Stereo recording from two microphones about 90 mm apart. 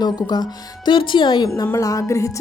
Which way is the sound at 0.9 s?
65° left (ahead or behind).